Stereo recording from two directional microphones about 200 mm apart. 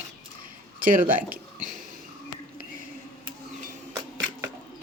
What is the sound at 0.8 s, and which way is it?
Speech, 40° right (ahead or behind).